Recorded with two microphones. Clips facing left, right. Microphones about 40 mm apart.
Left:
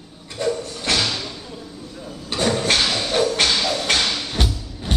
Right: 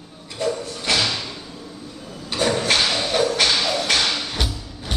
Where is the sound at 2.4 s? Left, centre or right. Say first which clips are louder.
Even; centre.